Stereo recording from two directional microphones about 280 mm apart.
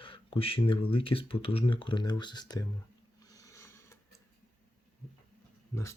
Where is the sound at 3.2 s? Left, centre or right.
Centre.